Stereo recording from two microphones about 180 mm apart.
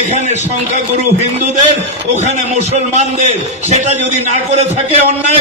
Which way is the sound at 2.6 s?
40° right (ahead or behind).